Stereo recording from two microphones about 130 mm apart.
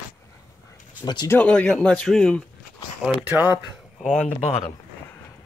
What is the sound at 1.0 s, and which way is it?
Speech, 35° left (ahead or behind).